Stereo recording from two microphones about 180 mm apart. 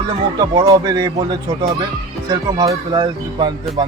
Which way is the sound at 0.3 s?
20° right (ahead or behind).